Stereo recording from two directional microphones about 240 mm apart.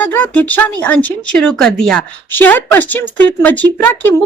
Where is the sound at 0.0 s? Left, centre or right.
Centre.